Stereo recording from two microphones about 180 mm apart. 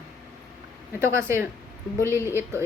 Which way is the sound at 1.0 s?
15° right (ahead or behind).